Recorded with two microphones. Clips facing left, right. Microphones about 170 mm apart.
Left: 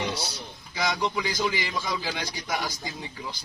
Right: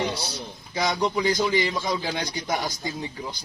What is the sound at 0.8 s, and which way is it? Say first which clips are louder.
A man's voice: right 4 dB; 25° right (ahead or behind).